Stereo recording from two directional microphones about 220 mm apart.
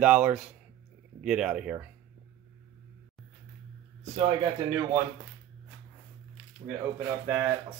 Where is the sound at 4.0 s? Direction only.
20° right (ahead or behind).